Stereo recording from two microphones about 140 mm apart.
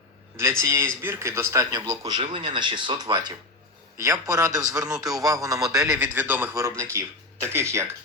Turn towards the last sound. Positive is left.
turn(degrees=-20)  # may be behind; listen again after turning